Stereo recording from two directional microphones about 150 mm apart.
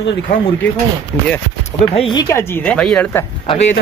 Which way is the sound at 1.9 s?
35° left (ahead or behind).